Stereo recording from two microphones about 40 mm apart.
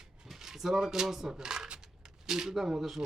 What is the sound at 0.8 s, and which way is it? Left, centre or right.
Speech, centre.